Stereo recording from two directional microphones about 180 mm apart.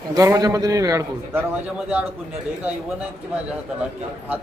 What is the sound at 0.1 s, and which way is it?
A man's voice, 20° right (ahead or behind).